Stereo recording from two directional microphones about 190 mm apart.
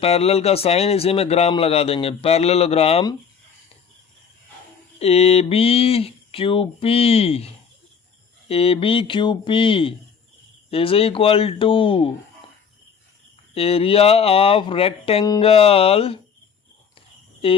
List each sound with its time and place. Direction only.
0.0 s speech: 30° left (ahead or behind)
4.9 s speech: 35° left (ahead or behind)
13.5 s speech: 30° left (ahead or behind)